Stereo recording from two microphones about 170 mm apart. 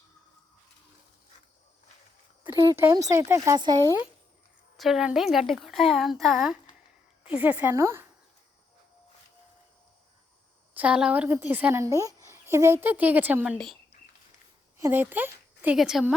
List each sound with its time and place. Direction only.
2.6 s speech: 20° right (ahead or behind)
4.8 s a woman's voice: 5° right (ahead or behind)
10.8 s a woman's voice: 5° right (ahead or behind)
14.8 s a woman's voice: 15° right (ahead or behind)